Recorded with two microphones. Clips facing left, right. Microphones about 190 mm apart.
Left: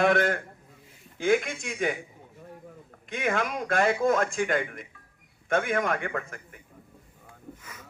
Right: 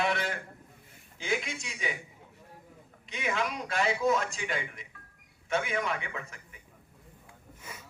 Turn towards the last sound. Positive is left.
turn(degrees=50)  # may be behind; listen again after turning